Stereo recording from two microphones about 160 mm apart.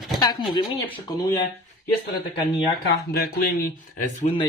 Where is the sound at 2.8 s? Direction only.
70° left (ahead or behind); by 4.3 s 55° left (ahead or behind).